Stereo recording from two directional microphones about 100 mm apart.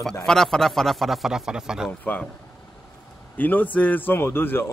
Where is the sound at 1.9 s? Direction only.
15° left (ahead or behind).